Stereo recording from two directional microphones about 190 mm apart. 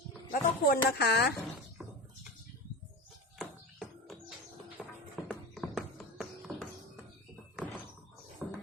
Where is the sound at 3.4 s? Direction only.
5° left (ahead or behind).